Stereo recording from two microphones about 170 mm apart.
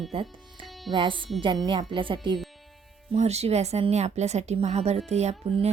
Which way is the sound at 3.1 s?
40° right (ahead or behind).